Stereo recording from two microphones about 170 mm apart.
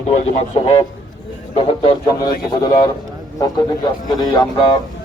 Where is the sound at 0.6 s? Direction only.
30° left (ahead or behind).